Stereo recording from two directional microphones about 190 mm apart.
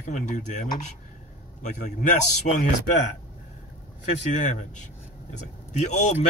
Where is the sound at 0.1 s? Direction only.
40° left (ahead or behind).